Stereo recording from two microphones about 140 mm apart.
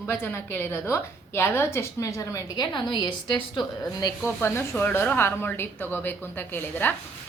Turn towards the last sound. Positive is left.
turn(degrees=15)  # may be behind; listen again after turning